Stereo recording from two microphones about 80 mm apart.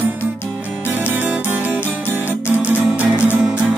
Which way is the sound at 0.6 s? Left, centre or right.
Centre.